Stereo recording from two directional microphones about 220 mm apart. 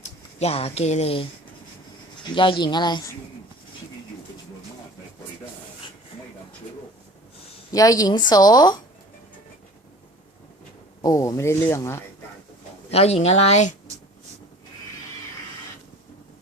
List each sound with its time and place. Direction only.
0.3 s speech: 25° left (ahead or behind)
7.7 s speech: 15° left (ahead or behind)
11.0 s speech: 15° left (ahead or behind)
12.9 s speech: 30° left (ahead or behind)